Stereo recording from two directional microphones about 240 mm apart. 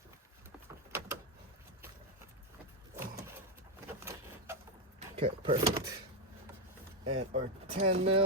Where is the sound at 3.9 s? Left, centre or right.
Centre.